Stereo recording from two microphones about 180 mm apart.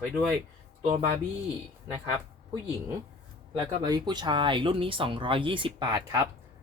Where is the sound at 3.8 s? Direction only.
20° right (ahead or behind).